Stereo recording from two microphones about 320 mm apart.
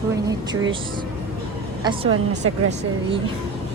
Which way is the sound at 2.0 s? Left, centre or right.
Right.